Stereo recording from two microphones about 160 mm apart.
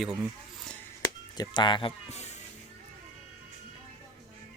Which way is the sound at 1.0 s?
25° left (ahead or behind).